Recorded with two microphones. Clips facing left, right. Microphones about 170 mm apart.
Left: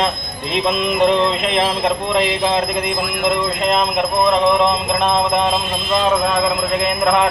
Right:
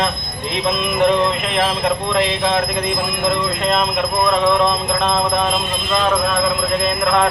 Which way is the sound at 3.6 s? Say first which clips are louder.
Left 1 dB; 20° left (ahead or behind).